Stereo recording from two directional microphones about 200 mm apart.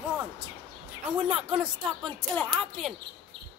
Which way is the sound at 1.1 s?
5° right (ahead or behind).